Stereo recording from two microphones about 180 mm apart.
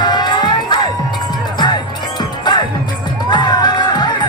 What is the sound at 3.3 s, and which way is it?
Music, 25° left (ahead or behind).